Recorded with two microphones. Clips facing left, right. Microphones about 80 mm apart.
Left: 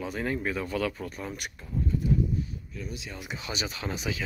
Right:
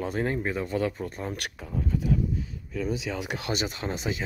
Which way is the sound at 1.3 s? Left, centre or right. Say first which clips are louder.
Right 1 dB; right.